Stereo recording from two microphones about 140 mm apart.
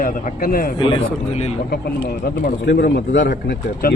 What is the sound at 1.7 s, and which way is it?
Speech, 90° left.